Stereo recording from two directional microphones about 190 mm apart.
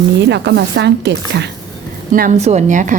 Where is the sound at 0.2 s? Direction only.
65° right (ahead or behind).